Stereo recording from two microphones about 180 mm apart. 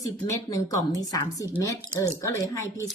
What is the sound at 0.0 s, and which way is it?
A woman's voice, 15° left (ahead or behind).